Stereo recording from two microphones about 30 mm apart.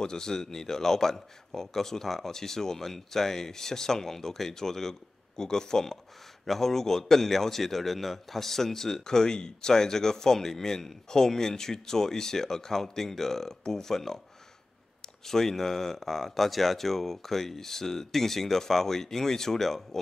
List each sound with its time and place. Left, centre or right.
0.0 s a man's voice: left